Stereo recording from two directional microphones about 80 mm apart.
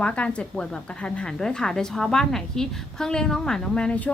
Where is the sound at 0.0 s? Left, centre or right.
Centre.